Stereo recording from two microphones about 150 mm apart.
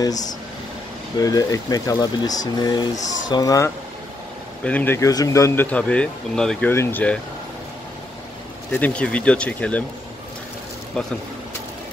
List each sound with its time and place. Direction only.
0.0 s speech: 25° left (ahead or behind)
4.6 s speech: 10° left (ahead or behind)
6.7 s speech: 15° left (ahead or behind)
8.7 s speech: 10° left (ahead or behind)